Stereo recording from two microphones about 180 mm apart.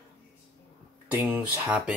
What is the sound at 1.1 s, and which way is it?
Speech, 10° right (ahead or behind).